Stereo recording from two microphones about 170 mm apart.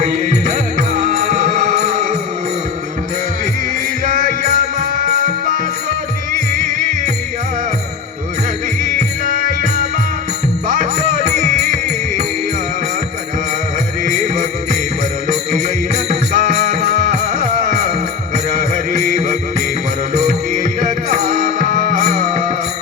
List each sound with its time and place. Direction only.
0.0 s music: 50° right (ahead or behind)
4.0 s music: 50° right (ahead or behind)
10.7 s music: 50° right (ahead or behind)
14.0 s jingle bell: 50° right (ahead or behind)
15.3 s music: 45° right (ahead or behind)